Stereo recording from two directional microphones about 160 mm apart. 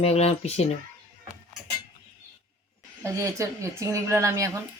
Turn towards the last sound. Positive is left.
turn(degrees=-20)  # may be behind; listen again after turning